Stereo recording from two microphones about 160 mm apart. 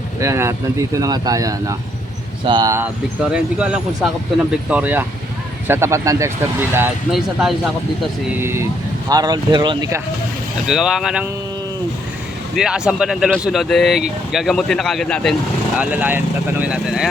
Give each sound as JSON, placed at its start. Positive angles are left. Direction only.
{"t": 0.2, "sound": "speech", "side_deg": -20}
{"t": 3.3, "sound": "speech", "side_deg": -5}
{"t": 7.1, "sound": "speech", "side_deg": 0}
{"t": 8.4, "sound": "speech", "side_deg": -15}
{"t": 10.7, "sound": "speech", "side_deg": -5}
{"t": 12.5, "sound": "speech", "side_deg": -5}
{"t": 15.8, "sound": "speech", "side_deg": -10}